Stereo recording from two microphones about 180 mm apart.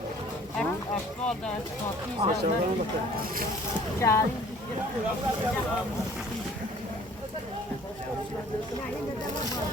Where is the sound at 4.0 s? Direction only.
15° left (ahead or behind).